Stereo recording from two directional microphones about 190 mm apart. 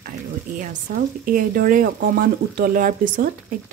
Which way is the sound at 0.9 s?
45° right (ahead or behind).